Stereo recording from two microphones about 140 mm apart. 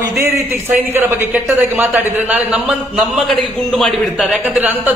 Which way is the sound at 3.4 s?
Centre (ahead or behind).